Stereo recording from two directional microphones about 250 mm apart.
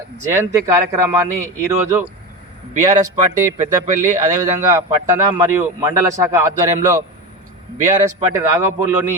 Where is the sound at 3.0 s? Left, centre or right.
Centre.